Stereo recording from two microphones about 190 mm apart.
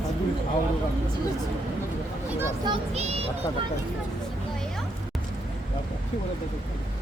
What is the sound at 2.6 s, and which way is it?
Speech, 30° right (ahead or behind).